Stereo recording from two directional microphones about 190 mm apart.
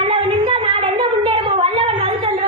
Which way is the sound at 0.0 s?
30° right (ahead or behind).